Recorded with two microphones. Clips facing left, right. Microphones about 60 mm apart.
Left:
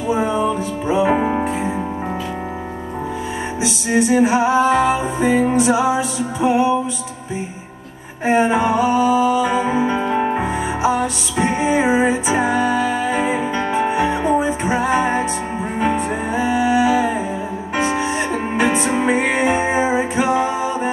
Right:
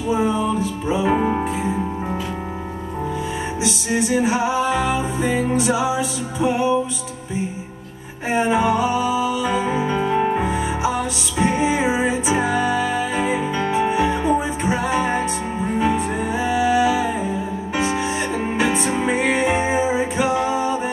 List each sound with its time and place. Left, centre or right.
0.1 s music: centre
1.1 s music: centre
3.6 s music: centre
8.3 s music: centre